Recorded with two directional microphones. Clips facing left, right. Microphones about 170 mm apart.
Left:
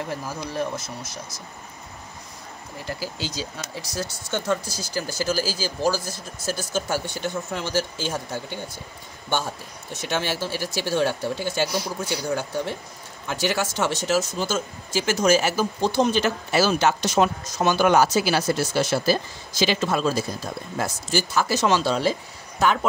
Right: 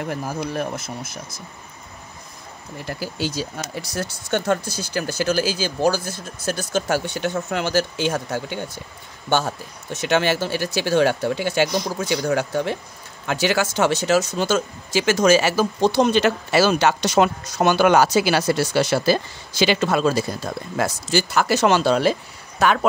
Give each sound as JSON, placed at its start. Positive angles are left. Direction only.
{"t": 0.0, "sound": "speech", "side_deg": -55}
{"t": 3.0, "sound": "speech", "side_deg": -55}
{"t": 10.0, "sound": "speech", "side_deg": -70}
{"t": 20.7, "sound": "speech", "side_deg": -85}